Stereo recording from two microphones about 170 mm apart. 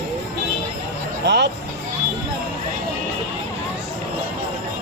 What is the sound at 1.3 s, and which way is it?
Speech, 90° right.